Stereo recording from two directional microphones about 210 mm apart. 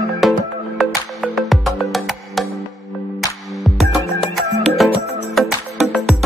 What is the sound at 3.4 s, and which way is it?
Music, centre (ahead or behind).